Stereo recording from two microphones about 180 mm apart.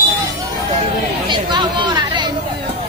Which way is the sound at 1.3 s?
25° right (ahead or behind).